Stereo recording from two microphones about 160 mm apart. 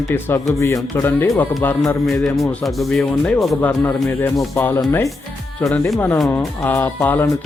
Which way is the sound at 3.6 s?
15° left (ahead or behind).